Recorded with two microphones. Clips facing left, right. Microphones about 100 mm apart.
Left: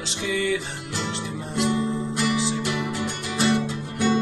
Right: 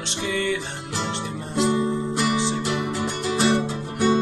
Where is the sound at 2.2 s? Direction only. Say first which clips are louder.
Even; 30° right (ahead or behind).